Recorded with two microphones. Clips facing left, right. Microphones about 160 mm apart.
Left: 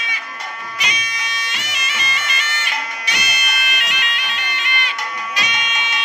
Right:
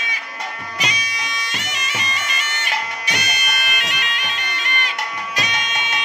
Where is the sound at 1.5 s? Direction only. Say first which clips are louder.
Right 1 dB; 45° right (ahead or behind).